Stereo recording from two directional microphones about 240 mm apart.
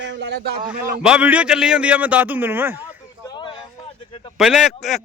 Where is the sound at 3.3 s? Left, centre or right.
Centre.